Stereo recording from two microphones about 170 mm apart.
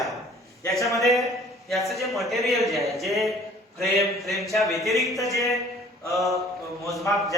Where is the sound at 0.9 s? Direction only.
Centre (ahead or behind).